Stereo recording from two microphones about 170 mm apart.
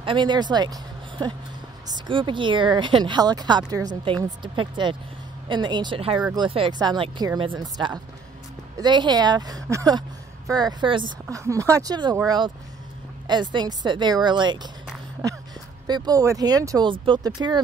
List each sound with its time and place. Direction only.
0.0 s speech: 30° right (ahead or behind)
13.3 s speech: 25° right (ahead or behind)
15.9 s speech: 20° right (ahead or behind)